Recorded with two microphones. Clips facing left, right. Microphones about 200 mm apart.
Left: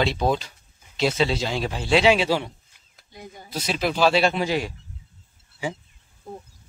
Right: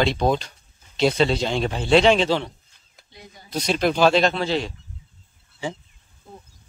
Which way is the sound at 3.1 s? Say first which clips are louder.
Left 5 dB; 50° left (ahead or behind).